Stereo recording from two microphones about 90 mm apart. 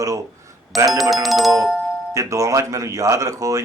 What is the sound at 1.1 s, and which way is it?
Music, centre (ahead or behind).